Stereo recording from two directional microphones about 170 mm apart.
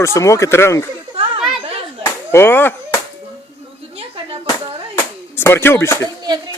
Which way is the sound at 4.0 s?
35° right (ahead or behind).